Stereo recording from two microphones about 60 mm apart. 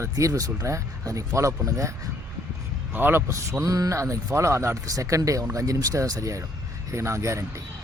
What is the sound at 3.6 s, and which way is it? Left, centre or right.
Speech, right.